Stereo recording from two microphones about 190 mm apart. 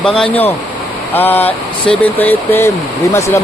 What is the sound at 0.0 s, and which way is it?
Speech, 5° left (ahead or behind).